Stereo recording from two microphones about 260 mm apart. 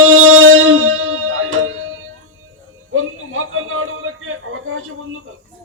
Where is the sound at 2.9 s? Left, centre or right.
Right.